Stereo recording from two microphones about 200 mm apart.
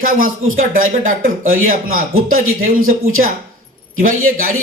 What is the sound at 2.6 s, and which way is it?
Speech, 90° right.